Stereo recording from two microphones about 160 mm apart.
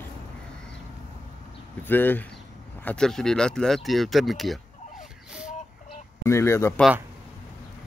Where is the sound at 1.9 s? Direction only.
10° left (ahead or behind).